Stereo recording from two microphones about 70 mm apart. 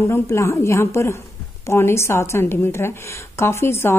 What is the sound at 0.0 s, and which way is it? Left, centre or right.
A woman's voice, left.